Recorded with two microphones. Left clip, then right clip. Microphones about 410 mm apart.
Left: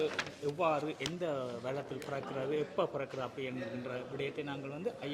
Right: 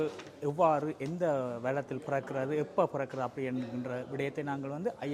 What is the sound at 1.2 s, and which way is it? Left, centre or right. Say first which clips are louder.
A man's voice: right 8 dB; right.